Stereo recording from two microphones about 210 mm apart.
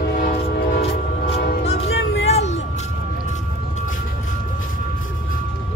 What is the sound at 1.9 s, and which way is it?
Music, 60° left (ahead or behind).